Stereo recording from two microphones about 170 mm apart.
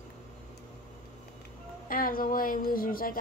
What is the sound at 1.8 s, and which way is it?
Speech, 55° left (ahead or behind).